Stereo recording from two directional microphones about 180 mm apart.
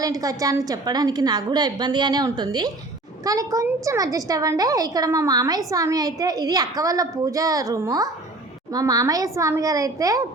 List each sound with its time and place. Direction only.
0.0 s a woman's voice: 20° right (ahead or behind)